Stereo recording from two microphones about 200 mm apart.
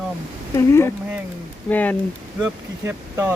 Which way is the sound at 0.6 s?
15° left (ahead or behind).